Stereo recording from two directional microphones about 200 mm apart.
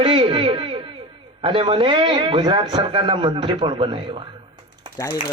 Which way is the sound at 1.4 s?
25° right (ahead or behind).